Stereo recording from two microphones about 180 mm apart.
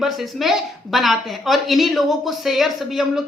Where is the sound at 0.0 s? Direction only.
Centre (ahead or behind).